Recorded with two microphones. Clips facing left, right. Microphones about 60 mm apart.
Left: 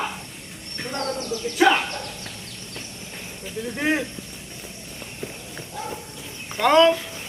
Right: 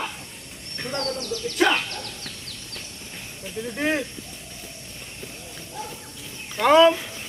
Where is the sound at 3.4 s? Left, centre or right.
Centre.